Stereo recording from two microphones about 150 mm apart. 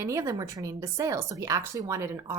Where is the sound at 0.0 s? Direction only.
20° right (ahead or behind).